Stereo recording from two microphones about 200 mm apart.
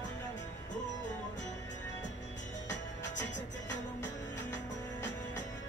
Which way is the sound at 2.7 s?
65° left (ahead or behind).